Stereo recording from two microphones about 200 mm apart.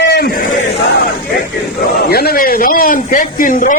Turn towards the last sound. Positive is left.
turn(degrees=40)  # may be behind; listen again after turning